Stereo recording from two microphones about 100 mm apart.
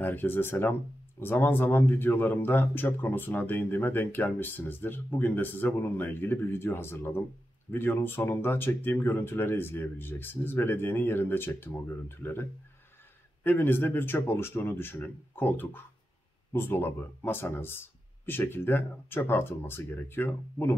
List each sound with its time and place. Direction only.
0.0 s speech: 20° left (ahead or behind)